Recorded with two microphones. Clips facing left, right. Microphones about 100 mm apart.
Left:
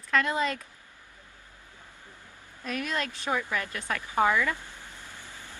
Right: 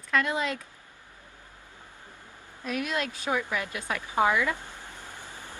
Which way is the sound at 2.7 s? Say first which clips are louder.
Right 1 dB; 10° right (ahead or behind).